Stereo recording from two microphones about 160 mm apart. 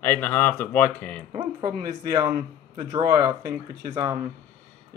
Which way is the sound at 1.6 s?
25° right (ahead or behind).